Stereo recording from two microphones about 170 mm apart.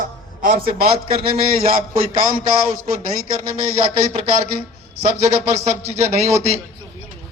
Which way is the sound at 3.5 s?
35° right (ahead or behind).